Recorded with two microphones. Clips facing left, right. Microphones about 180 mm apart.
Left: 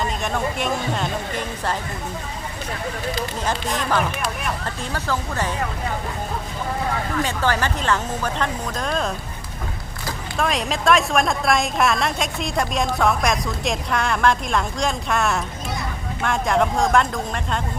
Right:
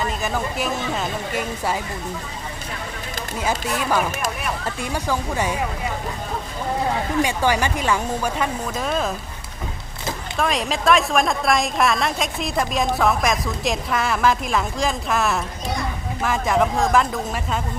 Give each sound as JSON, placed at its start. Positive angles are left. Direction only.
{"t": 0.0, "sound": "a woman's voice", "side_deg": -5}
{"t": 3.4, "sound": "speech", "side_deg": -5}
{"t": 7.2, "sound": "speech", "side_deg": -10}
{"t": 10.3, "sound": "a woman's voice", "side_deg": 0}